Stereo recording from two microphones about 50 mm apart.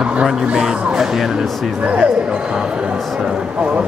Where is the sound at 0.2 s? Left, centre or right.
Centre.